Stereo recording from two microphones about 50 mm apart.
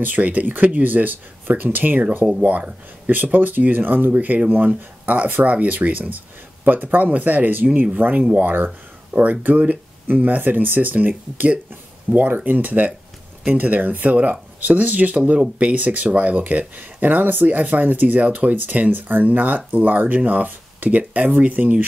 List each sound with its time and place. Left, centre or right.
0.0 s speech: right